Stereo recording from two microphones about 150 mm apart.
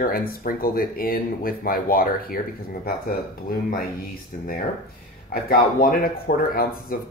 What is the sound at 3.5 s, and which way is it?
Speech, 90° left.